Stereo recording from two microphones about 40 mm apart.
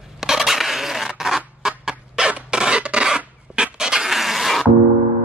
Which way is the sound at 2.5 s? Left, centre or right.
Right.